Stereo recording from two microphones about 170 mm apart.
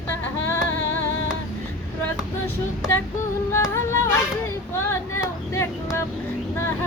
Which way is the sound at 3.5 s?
15° left (ahead or behind).